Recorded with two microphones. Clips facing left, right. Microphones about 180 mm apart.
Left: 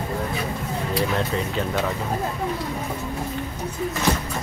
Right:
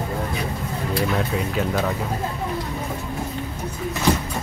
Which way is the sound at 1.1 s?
5° right (ahead or behind).